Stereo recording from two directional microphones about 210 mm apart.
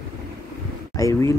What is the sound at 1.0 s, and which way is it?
Speech, 15° left (ahead or behind).